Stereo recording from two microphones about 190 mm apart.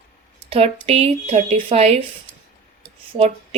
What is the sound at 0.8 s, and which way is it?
Speech, 30° right (ahead or behind).